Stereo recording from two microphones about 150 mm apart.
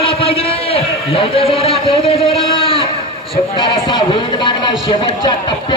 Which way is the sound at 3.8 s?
30° left (ahead or behind).